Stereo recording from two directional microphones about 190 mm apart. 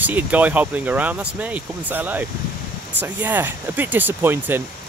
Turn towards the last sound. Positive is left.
turn(degrees=-10)  # may be behind; listen again after turning